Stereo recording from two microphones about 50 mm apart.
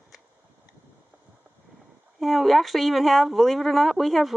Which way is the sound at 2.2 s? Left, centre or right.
Centre.